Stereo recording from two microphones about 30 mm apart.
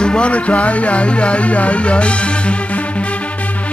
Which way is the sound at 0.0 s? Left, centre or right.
Left.